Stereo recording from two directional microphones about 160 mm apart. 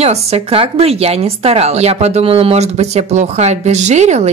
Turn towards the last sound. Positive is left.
turn(degrees=-45)  # may be behind; listen again after turning